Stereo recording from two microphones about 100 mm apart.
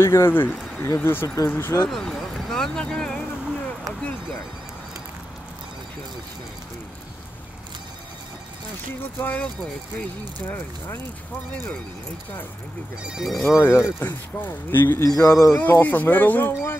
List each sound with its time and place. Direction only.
0.0 s speech: 25° left (ahead or behind)
1.9 s a sound: 5° left (ahead or behind)
9.2 s speech: 15° left (ahead or behind)
13.0 s speech: 5° right (ahead or behind)
13.6 s speech: 25° left (ahead or behind)
15.0 s a sound: 30° left (ahead or behind)
15.4 s speech: 25° left (ahead or behind)